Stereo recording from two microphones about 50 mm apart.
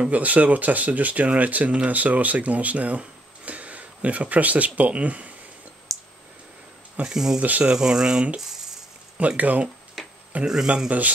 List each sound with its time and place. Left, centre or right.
0.1 s speech: right
5.9 s clicking: centre
7.1 s speech: centre
7.3 s speech: right
7.6 s speech: centre
9.4 s speech: right
10.0 s tick-tock: centre
10.4 s speech: centre
10.9 s speech: right